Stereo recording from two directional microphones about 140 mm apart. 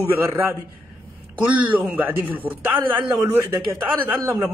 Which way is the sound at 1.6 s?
10° right (ahead or behind).